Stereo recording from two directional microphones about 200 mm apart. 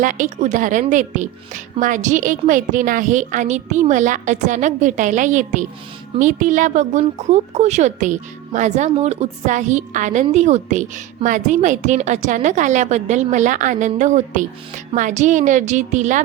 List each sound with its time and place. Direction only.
0.0 s a woman's voice: 40° right (ahead or behind)